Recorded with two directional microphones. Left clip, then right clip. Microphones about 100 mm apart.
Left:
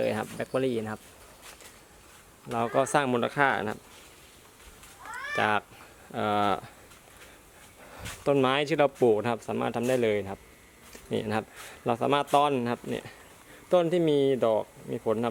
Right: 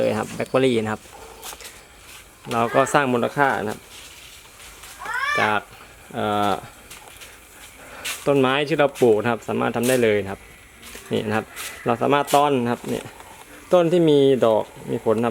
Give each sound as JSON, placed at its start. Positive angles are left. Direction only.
{"t": 0.0, "sound": "speech", "side_deg": 20}
{"t": 0.5, "sound": "speech", "side_deg": 0}
{"t": 2.6, "sound": "speech", "side_deg": 25}
{"t": 5.4, "sound": "speech", "side_deg": 45}
{"t": 8.2, "sound": "speech", "side_deg": 40}
{"t": 9.0, "sound": "speech", "side_deg": 30}
{"t": 13.7, "sound": "speech", "side_deg": 10}